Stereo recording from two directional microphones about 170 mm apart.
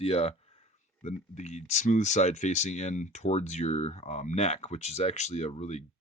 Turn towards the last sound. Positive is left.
turn(degrees=40)  # may be behind; listen again after turning